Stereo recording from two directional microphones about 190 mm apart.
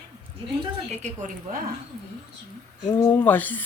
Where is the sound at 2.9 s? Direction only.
10° left (ahead or behind).